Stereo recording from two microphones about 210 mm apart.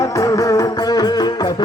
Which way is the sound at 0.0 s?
15° left (ahead or behind).